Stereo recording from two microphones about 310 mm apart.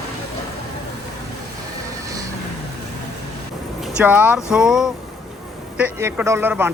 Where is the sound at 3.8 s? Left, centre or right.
Centre.